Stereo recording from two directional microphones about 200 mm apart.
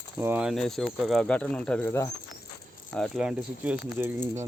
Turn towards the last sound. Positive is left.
turn(degrees=-10)  # may be behind; listen again after turning